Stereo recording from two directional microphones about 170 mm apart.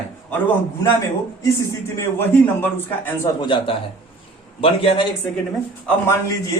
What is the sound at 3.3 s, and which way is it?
Speech, 30° left (ahead or behind).